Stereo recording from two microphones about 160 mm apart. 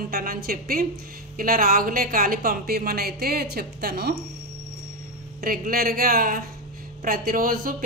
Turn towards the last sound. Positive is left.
turn(degrees=-60)  # may be behind; listen again after turning